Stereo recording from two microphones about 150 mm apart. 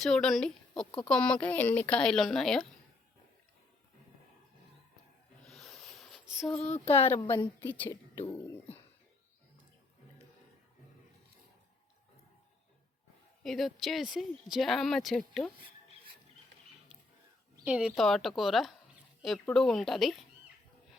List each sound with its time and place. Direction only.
0.0 s speech: 5° left (ahead or behind)
5.5 s a sound: centre (ahead or behind)
6.7 s speech: 40° left (ahead or behind)
7.6 s speech: 15° left (ahead or behind)
13.4 s speech: centre (ahead or behind)
17.7 s speech: 5° right (ahead or behind)